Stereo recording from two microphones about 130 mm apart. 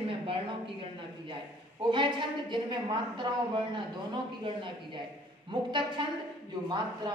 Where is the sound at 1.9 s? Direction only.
35° right (ahead or behind).